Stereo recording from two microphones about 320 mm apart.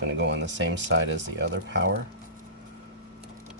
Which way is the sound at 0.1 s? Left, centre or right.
Right.